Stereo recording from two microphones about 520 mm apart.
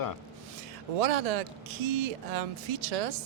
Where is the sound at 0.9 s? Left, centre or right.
Right.